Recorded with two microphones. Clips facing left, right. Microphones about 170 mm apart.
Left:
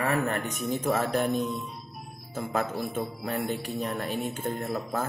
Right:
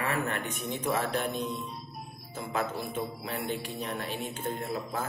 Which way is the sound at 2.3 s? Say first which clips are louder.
Left 3 dB; 50° left (ahead or behind).